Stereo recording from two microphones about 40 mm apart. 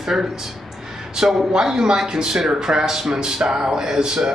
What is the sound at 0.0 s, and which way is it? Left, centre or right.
Speech, centre.